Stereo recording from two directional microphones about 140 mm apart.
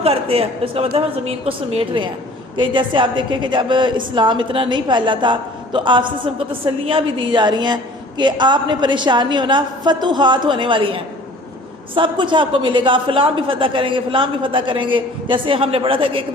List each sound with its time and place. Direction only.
0.0 s a woman's voice: 45° right (ahead or behind)